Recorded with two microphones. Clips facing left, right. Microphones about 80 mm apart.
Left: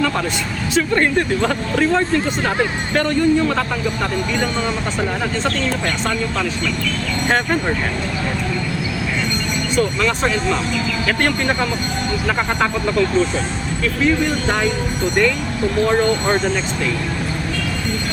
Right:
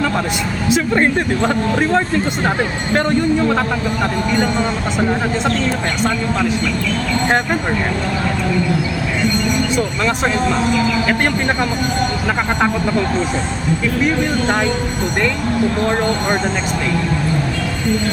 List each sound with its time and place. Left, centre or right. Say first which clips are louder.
0.7 s speech: right 1 dB; centre